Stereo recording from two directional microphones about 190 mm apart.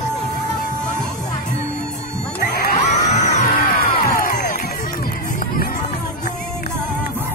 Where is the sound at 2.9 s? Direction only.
40° left (ahead or behind).